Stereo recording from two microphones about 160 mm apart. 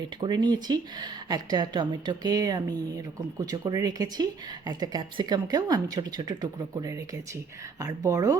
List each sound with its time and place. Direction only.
0.2 s speech: 25° right (ahead or behind)